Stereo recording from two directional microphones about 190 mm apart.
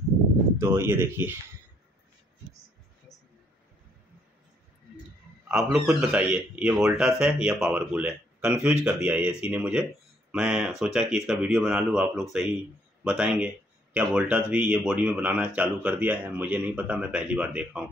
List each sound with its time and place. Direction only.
0.6 s speech: 10° right (ahead or behind)
5.7 s speech: 5° right (ahead or behind)